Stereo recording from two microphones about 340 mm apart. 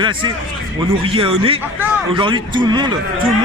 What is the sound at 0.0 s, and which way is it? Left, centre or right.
Speech, centre.